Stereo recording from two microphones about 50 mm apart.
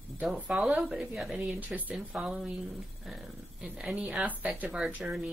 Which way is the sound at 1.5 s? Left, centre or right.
Right.